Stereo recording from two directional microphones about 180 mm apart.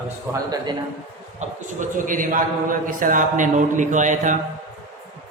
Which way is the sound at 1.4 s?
45° right (ahead or behind).